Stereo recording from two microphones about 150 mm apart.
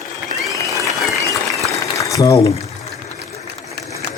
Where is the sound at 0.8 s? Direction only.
20° left (ahead or behind).